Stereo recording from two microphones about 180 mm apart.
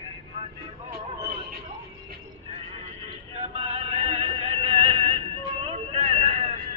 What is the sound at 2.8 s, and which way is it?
Music, 35° right (ahead or behind).